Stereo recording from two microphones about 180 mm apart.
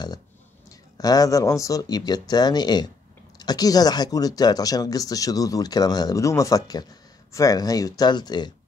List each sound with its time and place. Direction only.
0.7 s speech: 20° left (ahead or behind)